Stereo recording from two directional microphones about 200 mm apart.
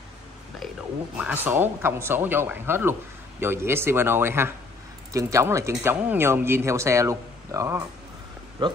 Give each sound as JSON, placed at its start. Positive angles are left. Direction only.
{"t": 1.1, "sound": "speech", "side_deg": -10}